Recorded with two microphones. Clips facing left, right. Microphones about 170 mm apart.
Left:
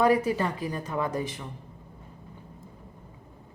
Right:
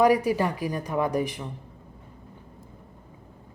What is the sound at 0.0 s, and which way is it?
Speech, 15° right (ahead or behind).